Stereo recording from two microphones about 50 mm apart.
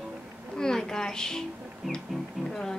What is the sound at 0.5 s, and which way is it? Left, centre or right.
Speech, centre.